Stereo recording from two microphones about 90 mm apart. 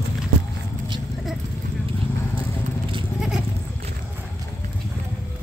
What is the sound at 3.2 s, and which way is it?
Goat, 5° right (ahead or behind).